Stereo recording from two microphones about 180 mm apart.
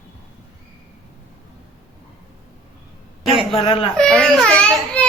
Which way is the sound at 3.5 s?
30° left (ahead or behind).